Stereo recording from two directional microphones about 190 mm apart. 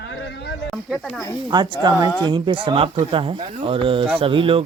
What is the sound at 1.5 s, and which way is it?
Speech, 25° right (ahead or behind).